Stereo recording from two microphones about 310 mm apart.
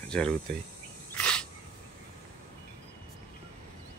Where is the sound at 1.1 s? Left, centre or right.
Centre.